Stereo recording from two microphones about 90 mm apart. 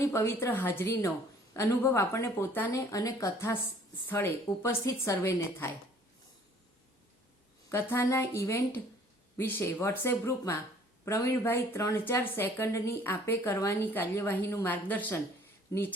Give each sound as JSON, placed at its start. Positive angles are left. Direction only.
{"t": 0.0, "sound": "speech", "side_deg": 30}
{"t": 2.9, "sound": "a woman's voice", "side_deg": 40}
{"t": 7.7, "sound": "speech", "side_deg": 30}
{"t": 15.7, "sound": "a woman's voice", "side_deg": 35}